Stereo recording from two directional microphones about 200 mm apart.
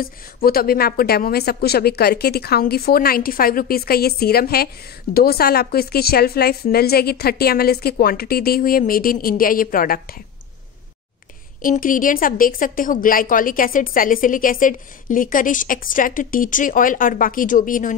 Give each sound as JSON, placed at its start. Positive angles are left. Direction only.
{"t": 0.0, "sound": "a woman's voice", "side_deg": 50}
{"t": 11.6, "sound": "a woman's voice", "side_deg": 40}